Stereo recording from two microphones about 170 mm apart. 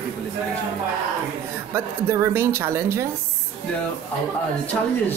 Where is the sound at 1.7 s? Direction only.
15° right (ahead or behind).